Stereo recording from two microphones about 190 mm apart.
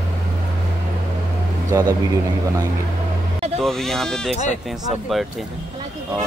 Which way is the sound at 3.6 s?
Centre (ahead or behind).